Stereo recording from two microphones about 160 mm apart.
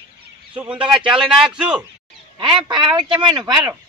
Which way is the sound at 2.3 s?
30° right (ahead or behind).